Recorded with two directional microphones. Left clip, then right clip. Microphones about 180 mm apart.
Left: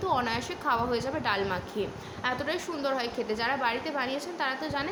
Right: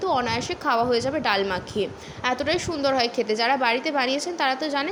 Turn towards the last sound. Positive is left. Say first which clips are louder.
# right 7 dB
turn(degrees=-35)  # may be behind; listen again after turning